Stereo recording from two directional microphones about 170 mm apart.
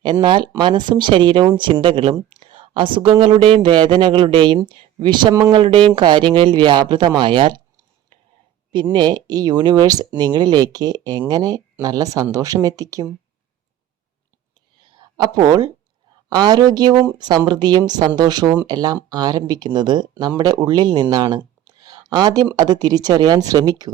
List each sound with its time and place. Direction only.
0.0 s speech: 30° right (ahead or behind)
8.7 s speech: 25° right (ahead or behind)
14.8 s a sound: 25° right (ahead or behind)
16.3 s speech: 25° right (ahead or behind)
16.9 s speech: 15° right (ahead or behind)
17.2 s speech: 25° right (ahead or behind)